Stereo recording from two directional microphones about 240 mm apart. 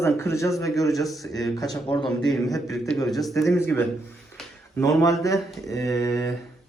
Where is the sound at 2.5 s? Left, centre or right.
Centre.